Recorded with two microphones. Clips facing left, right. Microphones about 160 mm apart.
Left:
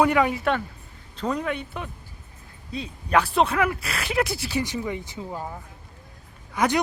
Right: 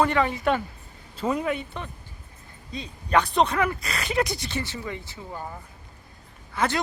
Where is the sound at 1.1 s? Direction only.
5° right (ahead or behind).